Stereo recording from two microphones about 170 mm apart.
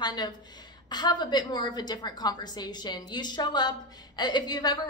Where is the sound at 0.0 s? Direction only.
25° left (ahead or behind).